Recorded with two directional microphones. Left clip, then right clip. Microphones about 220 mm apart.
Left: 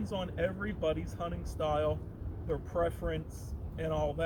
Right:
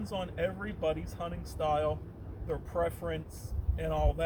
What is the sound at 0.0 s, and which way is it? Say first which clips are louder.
Speech: even; 25° right (ahead or behind).